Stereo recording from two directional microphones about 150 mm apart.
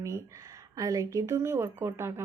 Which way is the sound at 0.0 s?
20° right (ahead or behind).